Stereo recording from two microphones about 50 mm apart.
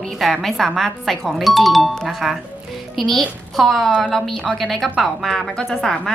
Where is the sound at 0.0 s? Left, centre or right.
Centre.